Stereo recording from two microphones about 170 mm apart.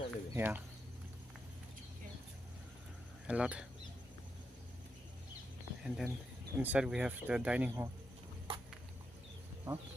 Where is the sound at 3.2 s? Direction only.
5° right (ahead or behind).